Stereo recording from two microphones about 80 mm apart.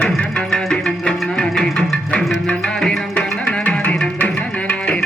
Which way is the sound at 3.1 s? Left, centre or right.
Centre.